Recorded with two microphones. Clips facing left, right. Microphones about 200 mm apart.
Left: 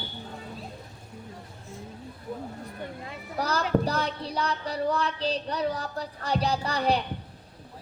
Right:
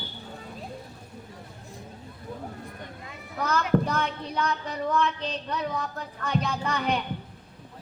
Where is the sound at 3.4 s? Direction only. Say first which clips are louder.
Right 1 dB; 35° left (ahead or behind).